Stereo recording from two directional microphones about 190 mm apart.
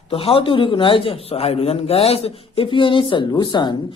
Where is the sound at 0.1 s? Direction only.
30° left (ahead or behind).